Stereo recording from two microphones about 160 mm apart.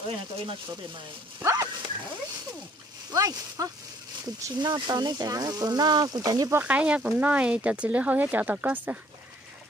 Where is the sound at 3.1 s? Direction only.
20° right (ahead or behind).